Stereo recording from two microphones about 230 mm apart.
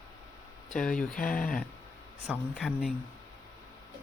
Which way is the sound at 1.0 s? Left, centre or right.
Left.